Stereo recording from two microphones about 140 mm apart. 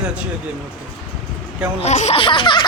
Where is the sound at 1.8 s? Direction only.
50° left (ahead or behind).